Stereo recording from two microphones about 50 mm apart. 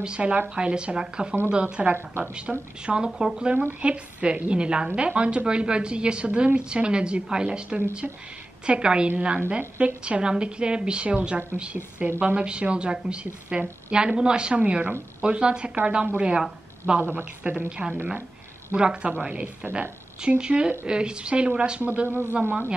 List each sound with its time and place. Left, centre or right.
0.0 s a woman's voice: right
22.0 s speech: right